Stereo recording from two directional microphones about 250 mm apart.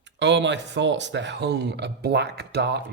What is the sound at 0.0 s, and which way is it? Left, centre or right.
Speech, right.